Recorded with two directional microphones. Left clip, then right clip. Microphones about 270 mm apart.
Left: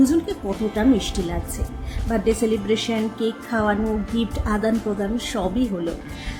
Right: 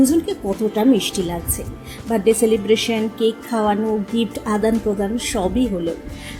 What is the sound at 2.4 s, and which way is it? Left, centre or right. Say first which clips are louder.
A woman's voice: right 5 dB; centre.